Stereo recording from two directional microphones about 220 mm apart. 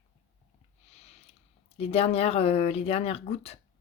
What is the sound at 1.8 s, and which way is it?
Speech, 25° left (ahead or behind).